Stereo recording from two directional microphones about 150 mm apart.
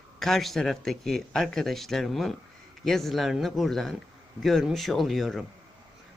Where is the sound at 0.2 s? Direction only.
Centre (ahead or behind).